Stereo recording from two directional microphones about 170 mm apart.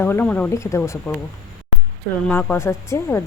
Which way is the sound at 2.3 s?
10° left (ahead or behind).